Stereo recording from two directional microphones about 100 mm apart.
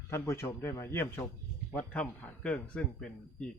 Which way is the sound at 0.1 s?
25° left (ahead or behind).